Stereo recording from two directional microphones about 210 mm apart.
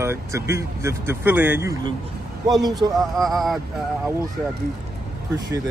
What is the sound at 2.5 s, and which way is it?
Speech, centre (ahead or behind).